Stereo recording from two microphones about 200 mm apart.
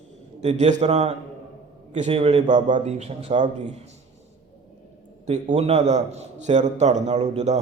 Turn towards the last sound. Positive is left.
turn(degrees=-35)  # may be behind; listen again after turning